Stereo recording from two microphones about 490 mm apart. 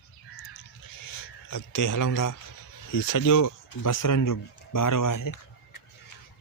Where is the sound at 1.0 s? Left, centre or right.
Left.